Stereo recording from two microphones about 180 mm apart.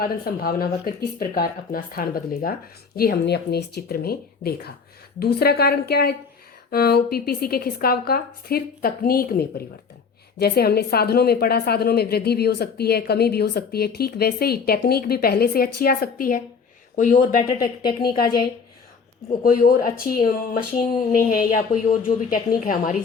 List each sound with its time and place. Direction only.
0.0 s a woman's voice: 55° left (ahead or behind)
18.1 s a woman's voice: 25° left (ahead or behind)
19.4 s a woman's voice: 50° left (ahead or behind)